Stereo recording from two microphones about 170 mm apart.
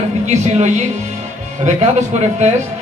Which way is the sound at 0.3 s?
40° right (ahead or behind).